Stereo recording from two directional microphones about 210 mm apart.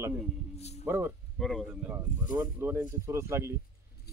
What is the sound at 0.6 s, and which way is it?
Speech, 30° left (ahead or behind).